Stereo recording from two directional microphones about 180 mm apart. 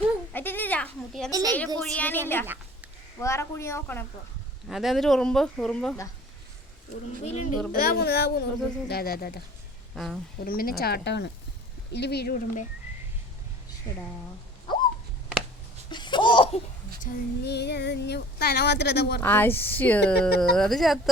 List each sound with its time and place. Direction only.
0.3 s a sound: 10° left (ahead or behind)
1.3 s speech: 20° right (ahead or behind)
1.8 s a woman's voice: 5° left (ahead or behind)
4.7 s speech: centre (ahead or behind)
7.3 s a child's voice: 40° left (ahead or behind)
7.7 s speech: 55° left (ahead or behind)
9.9 s speech: centre (ahead or behind)
10.4 s speech: 55° left (ahead or behind)
14.7 s a sound: 25° left (ahead or behind)
15.9 s laughter: 25° left (ahead or behind)
17.1 s female singing: 45° left (ahead or behind)
17.4 s speech: 65° left (ahead or behind)
19.2 s a woman's voice: 10° left (ahead or behind)